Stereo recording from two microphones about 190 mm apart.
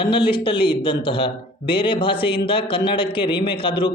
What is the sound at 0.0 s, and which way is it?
A man's voice, 25° left (ahead or behind).